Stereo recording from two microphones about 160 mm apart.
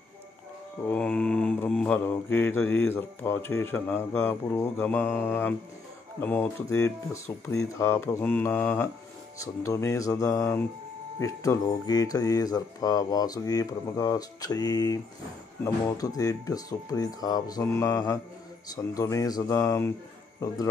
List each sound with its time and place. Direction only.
0.8 s mantra: 5° left (ahead or behind)
9.4 s speech: 20° left (ahead or behind)